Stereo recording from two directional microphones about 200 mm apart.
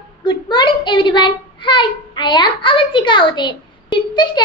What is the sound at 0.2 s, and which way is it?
A child's voice, 20° left (ahead or behind).